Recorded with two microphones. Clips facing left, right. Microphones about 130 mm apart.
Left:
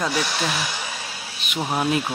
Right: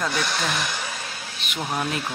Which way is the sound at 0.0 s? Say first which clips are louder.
Left 2 dB; 5° left (ahead or behind).